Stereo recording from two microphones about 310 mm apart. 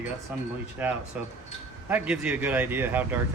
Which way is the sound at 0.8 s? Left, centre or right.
Centre.